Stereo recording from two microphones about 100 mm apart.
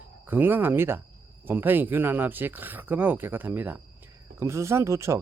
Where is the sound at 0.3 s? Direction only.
20° right (ahead or behind).